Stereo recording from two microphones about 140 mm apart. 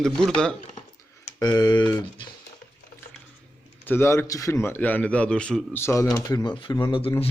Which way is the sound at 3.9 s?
20° left (ahead or behind).